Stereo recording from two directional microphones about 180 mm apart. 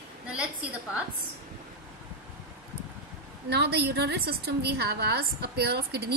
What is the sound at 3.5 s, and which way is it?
A woman's voice, 65° right (ahead or behind).